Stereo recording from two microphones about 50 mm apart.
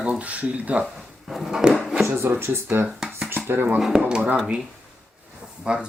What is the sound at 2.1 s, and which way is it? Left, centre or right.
Speech, right.